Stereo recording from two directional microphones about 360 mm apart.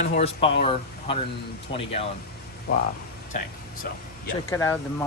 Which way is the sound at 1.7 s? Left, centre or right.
Centre.